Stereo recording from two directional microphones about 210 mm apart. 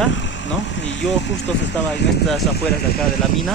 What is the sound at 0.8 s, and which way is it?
Speech, 60° left (ahead or behind).